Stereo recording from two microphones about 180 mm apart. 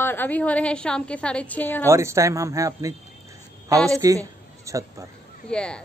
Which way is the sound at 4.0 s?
15° right (ahead or behind).